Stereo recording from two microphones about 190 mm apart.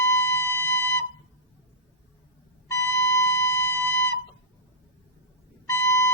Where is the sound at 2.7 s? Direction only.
15° left (ahead or behind).